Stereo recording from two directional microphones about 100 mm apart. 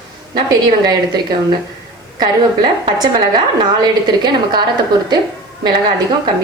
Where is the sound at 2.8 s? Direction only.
45° right (ahead or behind).